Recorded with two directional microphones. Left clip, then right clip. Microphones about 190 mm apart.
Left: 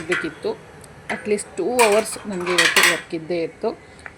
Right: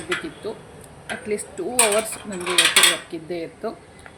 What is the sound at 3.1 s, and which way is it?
Speech, 15° left (ahead or behind).